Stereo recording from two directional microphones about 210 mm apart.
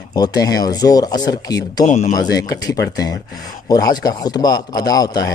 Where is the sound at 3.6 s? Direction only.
15° left (ahead or behind).